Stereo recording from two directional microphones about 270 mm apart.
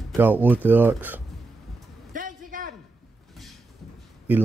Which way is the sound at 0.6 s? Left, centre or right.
Centre.